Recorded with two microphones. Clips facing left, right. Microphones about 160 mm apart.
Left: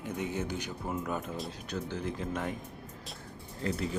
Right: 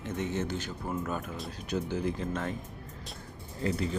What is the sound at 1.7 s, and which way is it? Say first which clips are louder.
Speech: right 6 dB; 10° right (ahead or behind).